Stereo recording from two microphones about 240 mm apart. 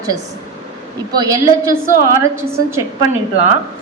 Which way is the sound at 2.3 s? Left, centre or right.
Centre.